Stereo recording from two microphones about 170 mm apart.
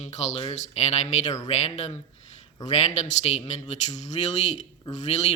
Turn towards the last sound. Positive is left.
turn(degrees=40)  # may be behind; listen again after turning